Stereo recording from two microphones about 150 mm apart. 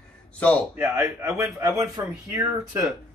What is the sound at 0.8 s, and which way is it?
A man's voice, 20° right (ahead or behind).